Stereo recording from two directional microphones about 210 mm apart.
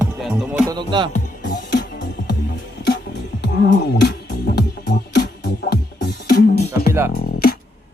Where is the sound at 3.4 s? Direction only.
55° left (ahead or behind).